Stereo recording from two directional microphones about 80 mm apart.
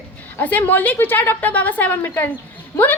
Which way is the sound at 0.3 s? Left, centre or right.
Left.